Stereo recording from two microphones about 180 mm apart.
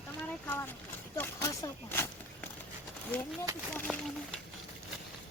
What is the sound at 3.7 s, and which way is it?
Speech, 5° left (ahead or behind).